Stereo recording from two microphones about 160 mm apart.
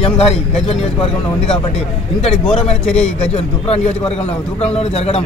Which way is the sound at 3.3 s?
40° left (ahead or behind).